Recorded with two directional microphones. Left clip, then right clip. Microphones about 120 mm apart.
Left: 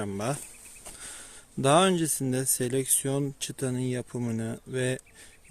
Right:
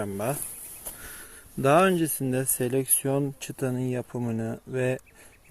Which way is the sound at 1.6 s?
10° left (ahead or behind).